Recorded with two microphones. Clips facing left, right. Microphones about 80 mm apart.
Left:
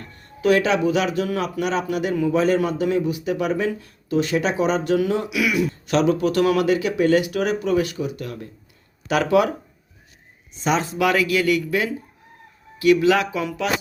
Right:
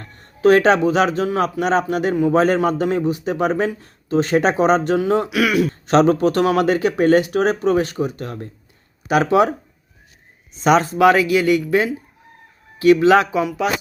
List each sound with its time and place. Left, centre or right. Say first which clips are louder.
0.0 s speech: right 7 dB; right
5.4 s speech: right 3 dB; right
5.8 s speech: right 5 dB; right
9.0 s speech: right 3 dB; right
10.6 s a man's voice: right 7 dB; right
10.9 s speech: right 6 dB; right
13.4 s speech: right 4 dB; centre